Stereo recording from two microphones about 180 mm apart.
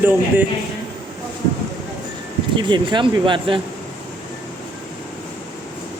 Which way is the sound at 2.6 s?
25° right (ahead or behind).